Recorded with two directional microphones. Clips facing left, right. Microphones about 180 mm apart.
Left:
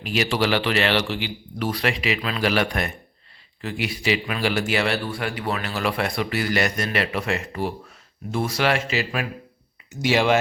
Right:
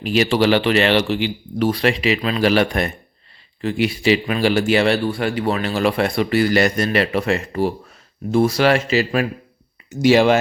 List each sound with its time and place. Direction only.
0.0 s speech: 30° right (ahead or behind)